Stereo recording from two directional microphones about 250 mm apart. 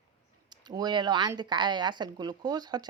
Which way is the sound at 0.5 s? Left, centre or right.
Centre.